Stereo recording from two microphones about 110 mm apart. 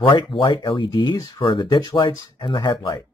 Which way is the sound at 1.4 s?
50° left (ahead or behind).